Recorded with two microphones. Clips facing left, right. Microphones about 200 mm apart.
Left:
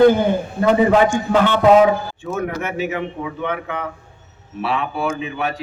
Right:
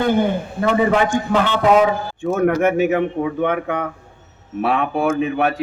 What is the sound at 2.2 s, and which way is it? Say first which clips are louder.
A man's voice: right 11 dB; 50° right (ahead or behind).